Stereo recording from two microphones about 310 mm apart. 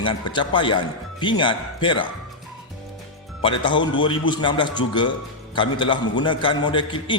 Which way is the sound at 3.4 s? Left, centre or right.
Centre.